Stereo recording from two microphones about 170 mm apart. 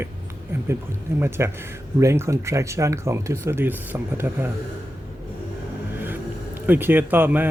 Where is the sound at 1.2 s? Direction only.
15° right (ahead or behind).